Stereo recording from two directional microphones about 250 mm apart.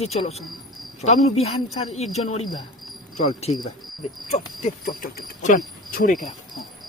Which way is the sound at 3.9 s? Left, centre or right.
Centre.